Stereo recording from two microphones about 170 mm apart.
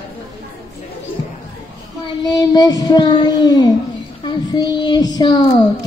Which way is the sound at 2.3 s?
20° left (ahead or behind).